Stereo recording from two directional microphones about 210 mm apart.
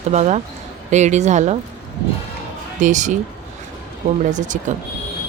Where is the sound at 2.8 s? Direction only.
35° right (ahead or behind).